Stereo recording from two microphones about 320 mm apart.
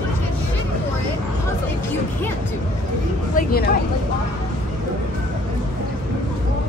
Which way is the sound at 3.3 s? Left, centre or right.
Left.